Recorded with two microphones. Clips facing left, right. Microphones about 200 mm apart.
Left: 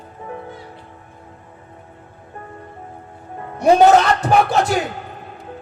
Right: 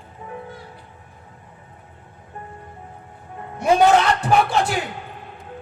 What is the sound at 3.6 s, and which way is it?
A man's voice, 40° left (ahead or behind).